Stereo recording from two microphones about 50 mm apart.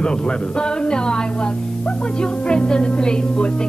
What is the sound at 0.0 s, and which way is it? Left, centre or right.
A woman's voice, centre.